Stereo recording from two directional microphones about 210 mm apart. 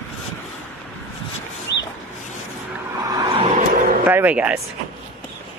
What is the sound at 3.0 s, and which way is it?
Vehicle, 20° right (ahead or behind).